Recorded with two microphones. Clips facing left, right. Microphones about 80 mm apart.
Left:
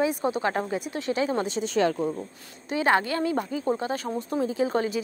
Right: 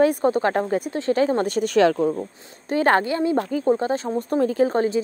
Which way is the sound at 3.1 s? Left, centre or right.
Right.